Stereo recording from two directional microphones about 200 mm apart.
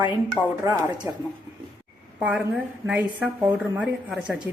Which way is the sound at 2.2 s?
5° right (ahead or behind).